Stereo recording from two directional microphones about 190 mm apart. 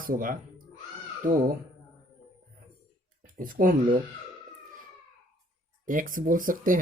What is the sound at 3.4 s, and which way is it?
Speech, 45° right (ahead or behind).